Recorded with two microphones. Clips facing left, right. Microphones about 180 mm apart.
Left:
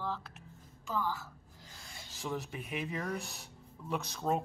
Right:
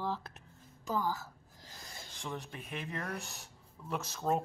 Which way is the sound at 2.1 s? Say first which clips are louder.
Left 4 dB; 5° left (ahead or behind).